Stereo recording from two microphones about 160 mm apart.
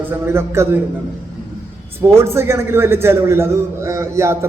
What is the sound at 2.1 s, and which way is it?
A man's voice, 15° right (ahead or behind).